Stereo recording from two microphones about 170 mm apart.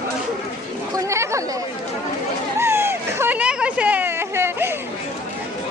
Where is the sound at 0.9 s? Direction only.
15° right (ahead or behind).